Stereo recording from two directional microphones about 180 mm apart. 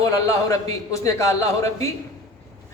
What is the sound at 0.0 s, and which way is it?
A man's voice, 20° left (ahead or behind).